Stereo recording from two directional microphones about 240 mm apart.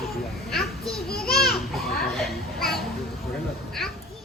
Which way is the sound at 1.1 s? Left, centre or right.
Left.